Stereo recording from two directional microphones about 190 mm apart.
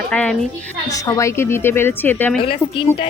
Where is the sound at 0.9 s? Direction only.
15° left (ahead or behind).